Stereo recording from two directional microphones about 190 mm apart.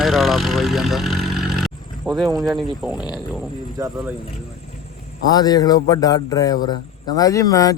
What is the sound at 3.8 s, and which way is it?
Speech, 15° right (ahead or behind).